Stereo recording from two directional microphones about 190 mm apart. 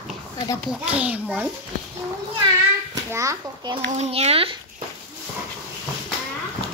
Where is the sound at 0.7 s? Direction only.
5° right (ahead or behind).